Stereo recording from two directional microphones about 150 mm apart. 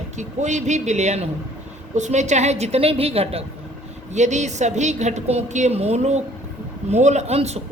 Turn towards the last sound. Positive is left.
turn(degrees=-45)  # may be behind; listen again after turning